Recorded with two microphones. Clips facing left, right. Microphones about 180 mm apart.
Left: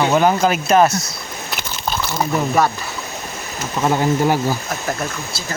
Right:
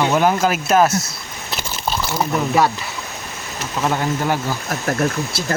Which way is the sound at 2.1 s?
5° right (ahead or behind).